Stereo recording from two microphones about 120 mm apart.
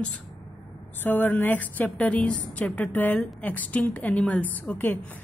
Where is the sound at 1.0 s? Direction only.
15° left (ahead or behind).